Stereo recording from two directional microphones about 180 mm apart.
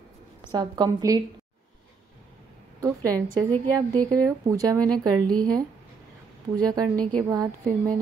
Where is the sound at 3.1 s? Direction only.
10° left (ahead or behind).